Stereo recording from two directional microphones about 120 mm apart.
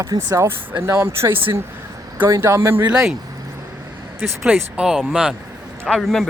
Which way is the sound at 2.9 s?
5° right (ahead or behind).